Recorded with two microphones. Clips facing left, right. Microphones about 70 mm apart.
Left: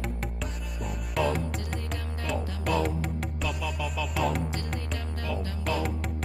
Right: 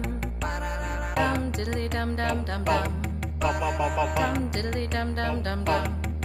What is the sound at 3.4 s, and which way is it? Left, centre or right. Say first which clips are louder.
Music: right 9 dB; right.